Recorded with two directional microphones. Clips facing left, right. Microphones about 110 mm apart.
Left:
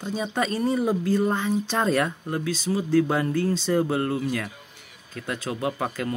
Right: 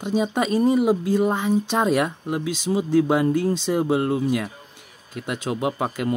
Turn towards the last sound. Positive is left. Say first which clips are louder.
# right 3 dB
turn(degrees=-20)  # may be behind; listen again after turning